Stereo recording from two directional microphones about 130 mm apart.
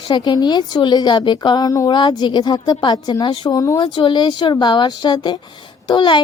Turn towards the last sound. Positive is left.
turn(degrees=35)  # may be behind; listen again after turning